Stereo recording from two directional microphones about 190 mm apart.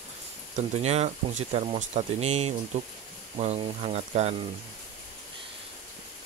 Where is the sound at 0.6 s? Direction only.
35° right (ahead or behind).